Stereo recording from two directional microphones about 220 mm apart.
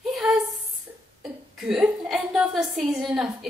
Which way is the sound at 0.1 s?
Centre (ahead or behind).